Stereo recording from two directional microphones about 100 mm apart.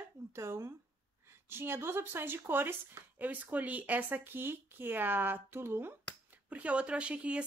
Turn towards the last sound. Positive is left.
turn(degrees=-10)  # may be behind; listen again after turning